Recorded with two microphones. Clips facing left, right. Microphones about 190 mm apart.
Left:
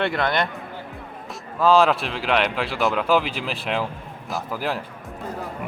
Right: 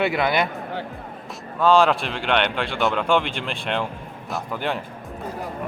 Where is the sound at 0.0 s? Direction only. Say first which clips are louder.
Right 2 dB; 5° right (ahead or behind).